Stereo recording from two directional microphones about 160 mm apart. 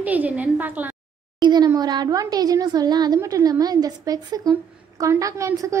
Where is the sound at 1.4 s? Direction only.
25° right (ahead or behind).